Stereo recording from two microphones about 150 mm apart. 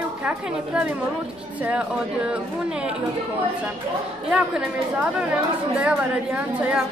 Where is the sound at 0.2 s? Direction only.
10° right (ahead or behind).